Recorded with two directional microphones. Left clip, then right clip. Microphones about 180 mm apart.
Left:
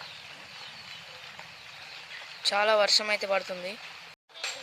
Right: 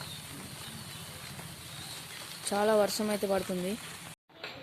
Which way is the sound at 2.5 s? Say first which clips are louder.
Left 3 dB; 15° left (ahead or behind).